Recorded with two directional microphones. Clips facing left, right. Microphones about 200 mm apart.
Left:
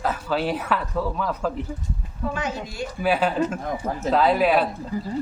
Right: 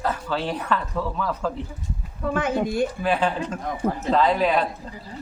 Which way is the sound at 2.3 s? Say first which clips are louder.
Right 7 dB; 55° right (ahead or behind).